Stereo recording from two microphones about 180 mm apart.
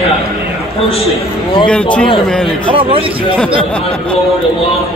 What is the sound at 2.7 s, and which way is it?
Speech, 30° right (ahead or behind).